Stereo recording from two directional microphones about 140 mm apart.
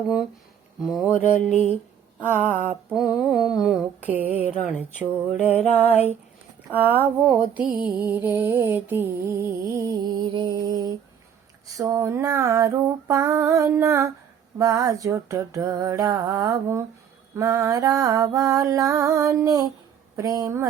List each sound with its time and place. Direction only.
0.8 s mantra: 5° right (ahead or behind)
2.6 s mantra: 5° right (ahead or behind); by 20.7 s 20° right (ahead or behind)